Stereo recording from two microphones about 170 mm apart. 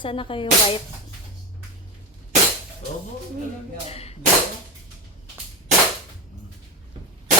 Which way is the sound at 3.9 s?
35° left (ahead or behind).